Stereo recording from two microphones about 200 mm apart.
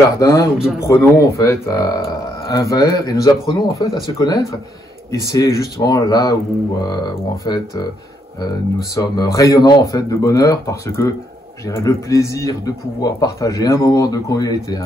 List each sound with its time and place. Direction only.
0.2 s a man's voice: 15° left (ahead or behind)
8.9 s a man's voice: 20° left (ahead or behind)